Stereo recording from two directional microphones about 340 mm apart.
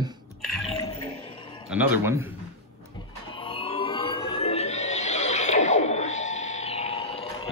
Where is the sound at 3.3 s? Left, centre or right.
Centre.